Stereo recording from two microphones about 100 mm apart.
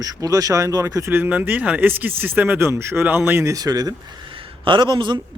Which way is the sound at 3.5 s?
40° right (ahead or behind).